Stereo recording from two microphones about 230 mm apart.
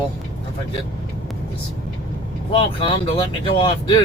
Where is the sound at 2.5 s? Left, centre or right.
Left.